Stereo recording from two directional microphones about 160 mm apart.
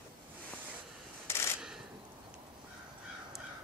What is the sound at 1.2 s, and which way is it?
Rub, 15° left (ahead or behind).